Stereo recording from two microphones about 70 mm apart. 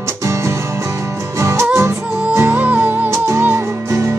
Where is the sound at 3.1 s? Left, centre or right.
Right.